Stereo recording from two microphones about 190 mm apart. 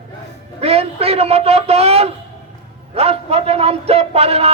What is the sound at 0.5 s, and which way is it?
A man's voice, 30° right (ahead or behind).